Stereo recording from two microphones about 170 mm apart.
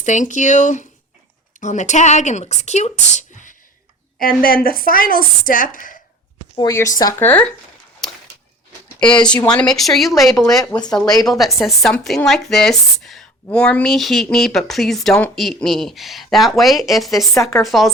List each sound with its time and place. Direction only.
0.0 s speech: 45° left (ahead or behind)
4.2 s speech: 60° left (ahead or behind)
6.6 s speech: 20° left (ahead or behind)
9.2 s speech: 5° left (ahead or behind)
10.9 s speech: 25° left (ahead or behind)
11.3 s speech: centre (ahead or behind)
17.3 s speech: 20° left (ahead or behind)
17.6 s speech: centre (ahead or behind)